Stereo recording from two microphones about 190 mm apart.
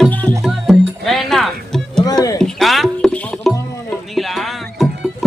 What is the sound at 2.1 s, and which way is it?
Music, 20° left (ahead or behind).